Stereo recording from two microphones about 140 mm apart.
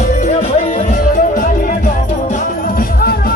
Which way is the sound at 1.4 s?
75° left (ahead or behind).